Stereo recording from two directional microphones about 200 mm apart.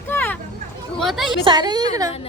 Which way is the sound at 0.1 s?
10° left (ahead or behind).